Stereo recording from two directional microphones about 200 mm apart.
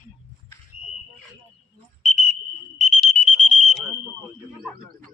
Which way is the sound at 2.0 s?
40° left (ahead or behind).